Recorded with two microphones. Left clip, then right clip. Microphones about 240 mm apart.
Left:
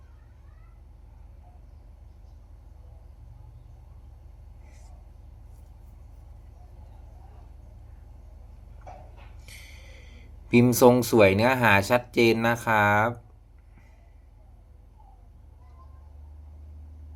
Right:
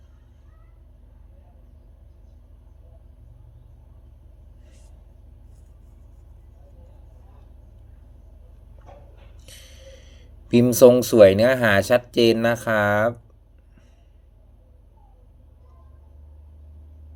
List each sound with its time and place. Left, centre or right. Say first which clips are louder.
9.5 s speech: right 3 dB; centre